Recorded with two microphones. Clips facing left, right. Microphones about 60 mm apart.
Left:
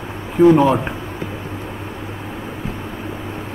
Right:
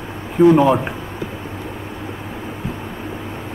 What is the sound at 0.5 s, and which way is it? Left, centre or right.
Speech, centre.